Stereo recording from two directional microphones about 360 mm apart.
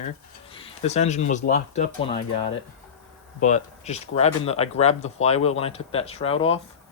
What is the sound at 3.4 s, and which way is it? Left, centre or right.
Speech, centre.